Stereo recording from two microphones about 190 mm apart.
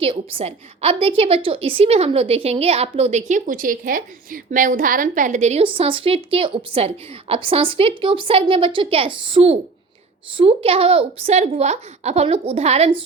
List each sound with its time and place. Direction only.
0.0 s a woman's voice: 30° right (ahead or behind)